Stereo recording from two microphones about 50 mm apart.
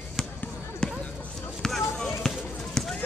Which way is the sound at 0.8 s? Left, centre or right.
Centre.